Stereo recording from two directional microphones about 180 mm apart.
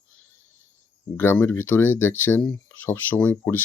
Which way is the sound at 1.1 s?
15° left (ahead or behind).